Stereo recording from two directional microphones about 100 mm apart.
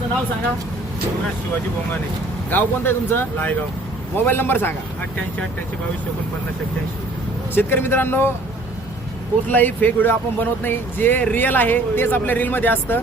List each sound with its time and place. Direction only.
2.5 s speech: 20° left (ahead or behind)
7.5 s speech: 20° left (ahead or behind)
9.5 s speech: 20° left (ahead or behind)